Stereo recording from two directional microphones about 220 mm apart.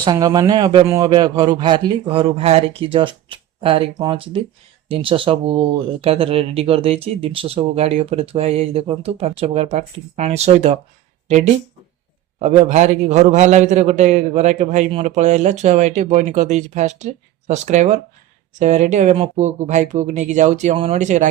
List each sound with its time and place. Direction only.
0.0 s a man's voice: 15° right (ahead or behind); by 21.2 s 35° right (ahead or behind)